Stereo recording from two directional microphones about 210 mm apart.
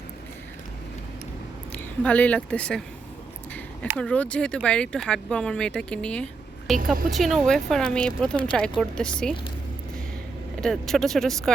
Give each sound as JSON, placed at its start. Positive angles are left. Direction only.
{"t": 1.7, "sound": "speech", "side_deg": 5}
{"t": 3.8, "sound": "speech", "side_deg": 5}
{"t": 6.7, "sound": "speech", "side_deg": -40}
{"t": 7.2, "sound": "speech", "side_deg": 0}
{"t": 10.6, "sound": "speech", "side_deg": 0}